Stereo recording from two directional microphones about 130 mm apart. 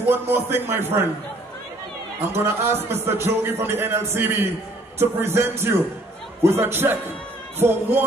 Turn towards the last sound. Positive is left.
turn(degrees=-15)  # may be behind; listen again after turning